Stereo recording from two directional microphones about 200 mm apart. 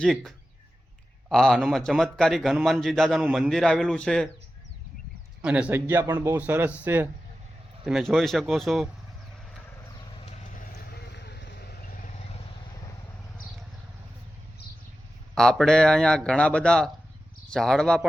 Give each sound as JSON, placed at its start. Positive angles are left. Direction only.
{"t": 0.0, "sound": "a man's voice", "side_deg": 0}
{"t": 5.4, "sound": "a man's voice", "side_deg": -5}
{"t": 11.1, "sound": "vehicle", "side_deg": 60}
{"t": 15.4, "sound": "a man's voice", "side_deg": 5}